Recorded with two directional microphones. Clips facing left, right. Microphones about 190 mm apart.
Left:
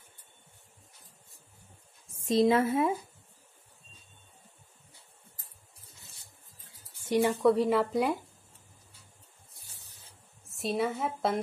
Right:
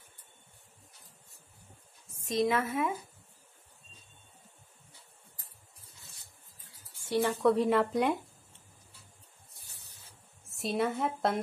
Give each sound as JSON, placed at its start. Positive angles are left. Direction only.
{"t": 2.2, "sound": "a woman's voice", "side_deg": 30}
{"t": 7.0, "sound": "speech", "side_deg": 15}
{"t": 7.3, "sound": "speech", "side_deg": 0}
{"t": 10.5, "sound": "a woman's voice", "side_deg": 0}